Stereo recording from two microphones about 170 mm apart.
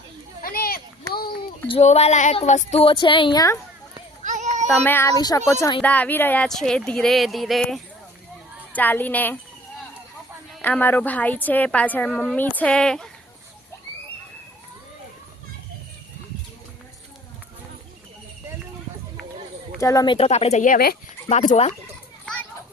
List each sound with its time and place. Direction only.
0.4 s a sound: 60° left (ahead or behind)
1.6 s speech: 35° left (ahead or behind)
4.2 s child singing: 45° right (ahead or behind)
4.6 s a woman's voice: 10° left (ahead or behind)
8.7 s a sound: 10° left (ahead or behind)
10.6 s a woman's voice: 10° left (ahead or behind)
19.8 s speech: 20° left (ahead or behind)
20.1 s speech: 35° left (ahead or behind); by 20.9 s 55° left (ahead or behind)
21.2 s speech: 40° left (ahead or behind)